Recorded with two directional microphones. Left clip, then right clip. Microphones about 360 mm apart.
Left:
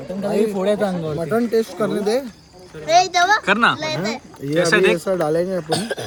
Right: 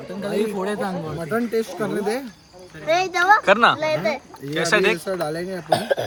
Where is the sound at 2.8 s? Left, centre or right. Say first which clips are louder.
Left 4 dB; centre.